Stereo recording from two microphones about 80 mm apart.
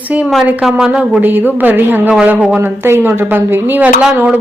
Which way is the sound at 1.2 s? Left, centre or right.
Right.